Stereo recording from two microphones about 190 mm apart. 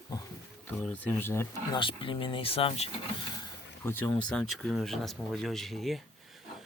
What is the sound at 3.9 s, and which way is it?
Speech, 10° left (ahead or behind).